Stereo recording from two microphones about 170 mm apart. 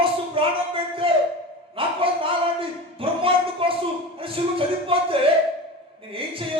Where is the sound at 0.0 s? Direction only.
30° right (ahead or behind).